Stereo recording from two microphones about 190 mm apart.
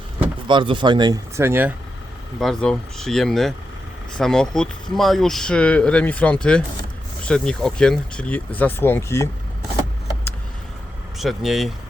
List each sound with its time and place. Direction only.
0.4 s speech: 25° right (ahead or behind)
2.4 s speech: centre (ahead or behind)
11.2 s speech: centre (ahead or behind)